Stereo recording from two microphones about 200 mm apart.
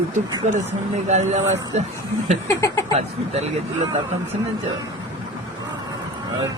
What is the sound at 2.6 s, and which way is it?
Speech, 15° left (ahead or behind).